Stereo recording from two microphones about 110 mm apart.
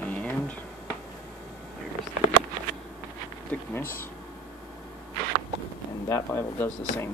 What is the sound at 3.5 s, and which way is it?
Speech, 15° left (ahead or behind).